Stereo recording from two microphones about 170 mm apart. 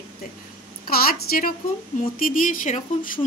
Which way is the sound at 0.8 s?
60° left (ahead or behind).